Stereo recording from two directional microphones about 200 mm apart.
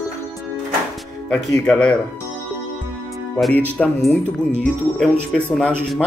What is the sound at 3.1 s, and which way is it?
Music, 5° left (ahead or behind).